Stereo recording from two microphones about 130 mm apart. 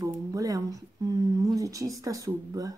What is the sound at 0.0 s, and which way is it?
Speech, 25° right (ahead or behind).